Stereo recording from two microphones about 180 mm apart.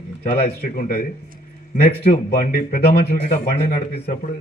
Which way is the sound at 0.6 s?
55° left (ahead or behind).